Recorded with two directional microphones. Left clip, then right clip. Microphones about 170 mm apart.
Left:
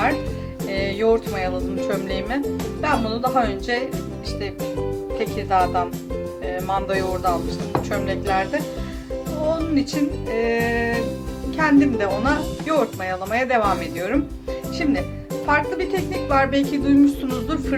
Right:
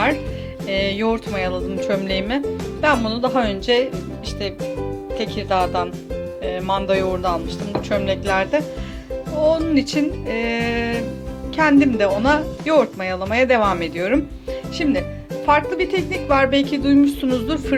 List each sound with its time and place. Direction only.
0.7 s music: 50° right (ahead or behind)
1.9 s speech: 45° right (ahead or behind)
5.1 s speech: 45° right (ahead or behind)
6.4 s music: 40° right (ahead or behind)
7.9 s speech: 40° right (ahead or behind)
15.4 s speech: 45° right (ahead or behind)